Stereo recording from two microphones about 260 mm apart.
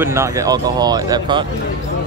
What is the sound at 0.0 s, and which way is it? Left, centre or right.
Speech, centre.